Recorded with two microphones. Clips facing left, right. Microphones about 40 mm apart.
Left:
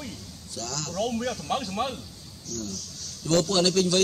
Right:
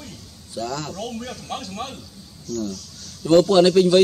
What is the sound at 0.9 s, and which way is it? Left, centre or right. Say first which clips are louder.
A man's voice: left 3 dB; centre.